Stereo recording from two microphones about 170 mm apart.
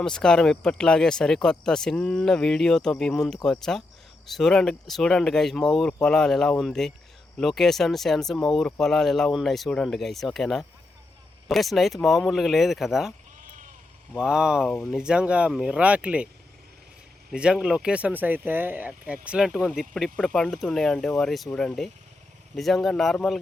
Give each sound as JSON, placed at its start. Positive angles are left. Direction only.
{"t": 0.0, "sound": "speech", "side_deg": 5}
{"t": 13.4, "sound": "sheep", "side_deg": -50}
{"t": 14.2, "sound": "speech", "side_deg": -5}
{"t": 17.3, "sound": "speech", "side_deg": -5}